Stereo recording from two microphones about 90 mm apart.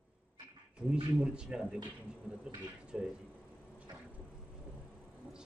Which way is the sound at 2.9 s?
10° right (ahead or behind).